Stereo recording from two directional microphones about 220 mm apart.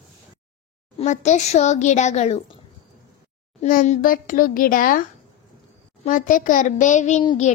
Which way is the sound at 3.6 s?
35° left (ahead or behind).